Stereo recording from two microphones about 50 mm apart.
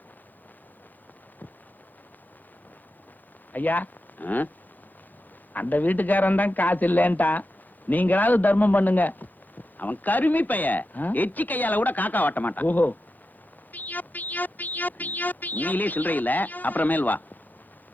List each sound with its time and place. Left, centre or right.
3.5 s speech: left
5.5 s speech: left
13.7 s music: left